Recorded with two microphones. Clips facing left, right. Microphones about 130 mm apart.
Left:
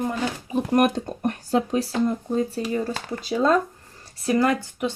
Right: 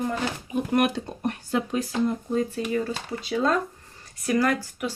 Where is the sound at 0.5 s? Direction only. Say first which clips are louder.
Left 3 dB; 40° left (ahead or behind).